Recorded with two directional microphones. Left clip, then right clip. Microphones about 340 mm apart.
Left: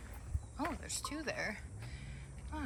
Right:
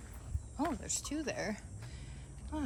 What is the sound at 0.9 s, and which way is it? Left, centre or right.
Speech, centre.